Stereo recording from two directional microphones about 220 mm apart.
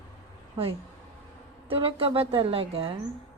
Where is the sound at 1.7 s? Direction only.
25° right (ahead or behind).